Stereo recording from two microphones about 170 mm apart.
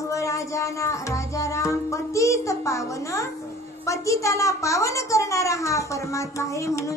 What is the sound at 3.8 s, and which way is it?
A woman's voice, 20° left (ahead or behind).